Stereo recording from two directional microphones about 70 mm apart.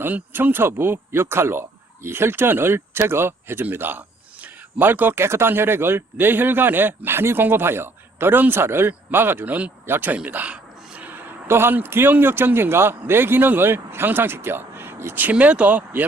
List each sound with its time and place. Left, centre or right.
0.0 s a man's voice: right